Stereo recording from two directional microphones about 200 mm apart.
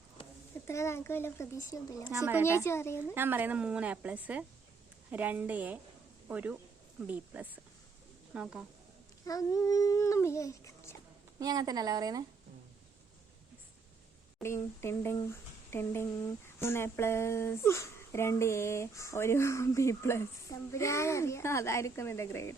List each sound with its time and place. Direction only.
0.7 s speech: 15° left (ahead or behind)
2.0 s a woman's voice: 10° right (ahead or behind)
2.6 s speech: 15° left (ahead or behind)
3.2 s a woman's voice: 10° right (ahead or behind)
9.2 s speech: 15° left (ahead or behind)
11.3 s speech: 20° right (ahead or behind)
14.4 s speech: 15° left (ahead or behind)